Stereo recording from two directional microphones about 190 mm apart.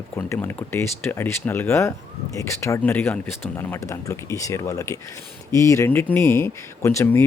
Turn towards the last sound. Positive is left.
turn(degrees=15)  # may be behind; listen again after turning